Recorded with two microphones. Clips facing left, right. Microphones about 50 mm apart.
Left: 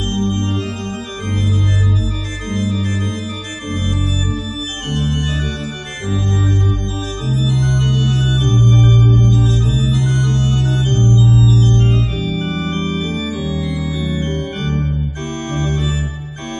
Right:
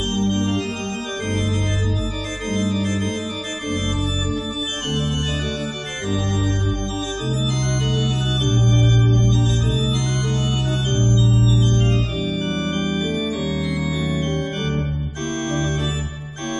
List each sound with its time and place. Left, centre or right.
0.1 s organ: centre
7.2 s organ: centre
7.8 s organ: centre
8.9 s music: centre
10.5 s music: centre
11.2 s organ: left
11.9 s organ: centre
13.5 s organ: centre
13.8 s music: centre
14.1 s organ: centre